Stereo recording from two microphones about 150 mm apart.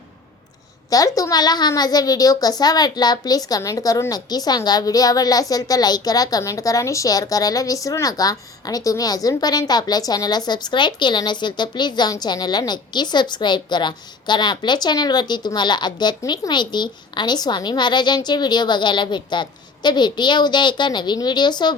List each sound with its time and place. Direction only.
0.9 s a child's voice: 25° left (ahead or behind)